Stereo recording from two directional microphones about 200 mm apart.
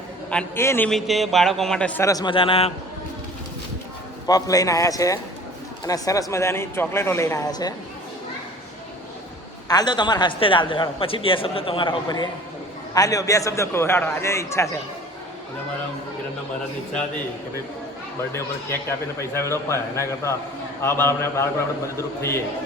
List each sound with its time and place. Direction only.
0.3 s a man's voice: 10° left (ahead or behind)
0.9 s a man's voice: centre (ahead or behind); by 2.7 s 30° left (ahead or behind)
4.3 s a man's voice: 15° left (ahead or behind)
9.6 s a man's voice: 20° left (ahead or behind)
18.3 s a man's voice: 15° left (ahead or behind)